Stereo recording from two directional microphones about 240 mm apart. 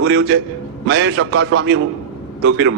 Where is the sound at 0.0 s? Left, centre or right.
Right.